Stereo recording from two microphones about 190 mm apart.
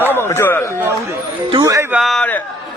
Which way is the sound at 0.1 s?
15° left (ahead or behind).